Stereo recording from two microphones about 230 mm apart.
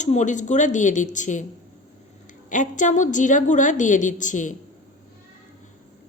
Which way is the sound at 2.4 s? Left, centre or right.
Left.